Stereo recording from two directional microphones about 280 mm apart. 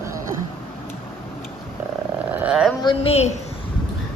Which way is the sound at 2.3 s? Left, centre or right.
Centre.